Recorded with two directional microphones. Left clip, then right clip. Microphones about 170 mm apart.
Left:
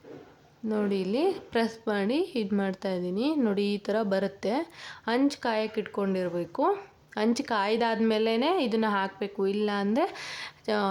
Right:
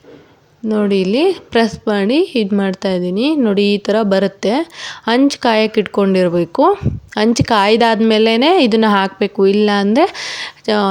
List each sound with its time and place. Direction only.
0.7 s a woman's voice: 25° right (ahead or behind)